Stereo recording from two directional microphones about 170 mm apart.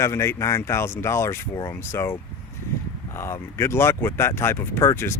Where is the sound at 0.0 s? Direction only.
15° left (ahead or behind).